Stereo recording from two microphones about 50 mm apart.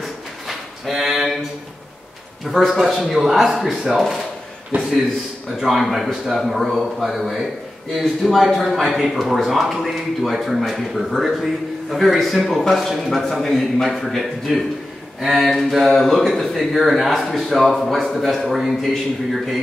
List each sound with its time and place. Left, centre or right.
0.0 s drawer open or close: centre
2.8 s speech: centre
4.7 s a man's voice: right
5.6 s speech: centre
15.1 s a sound: centre
15.9 s speech: centre